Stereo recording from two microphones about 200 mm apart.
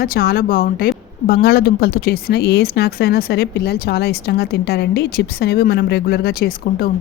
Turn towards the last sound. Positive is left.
turn(degrees=50)  # may be behind; listen again after turning